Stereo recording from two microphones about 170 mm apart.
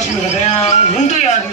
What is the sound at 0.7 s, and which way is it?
Music, 45° left (ahead or behind).